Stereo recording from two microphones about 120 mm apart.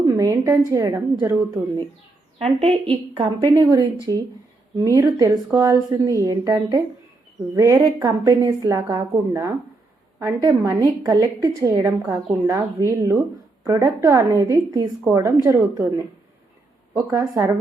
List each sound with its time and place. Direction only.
0.0 s a woman's voice: 30° right (ahead or behind)
2.4 s a woman's voice: 55° right (ahead or behind)
3.7 s a woman's voice: 35° right (ahead or behind)
15.0 s a woman's voice: 20° right (ahead or behind)
17.1 s a woman's voice: 25° right (ahead or behind)